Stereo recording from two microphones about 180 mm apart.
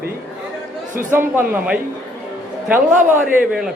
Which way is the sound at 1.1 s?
10° right (ahead or behind).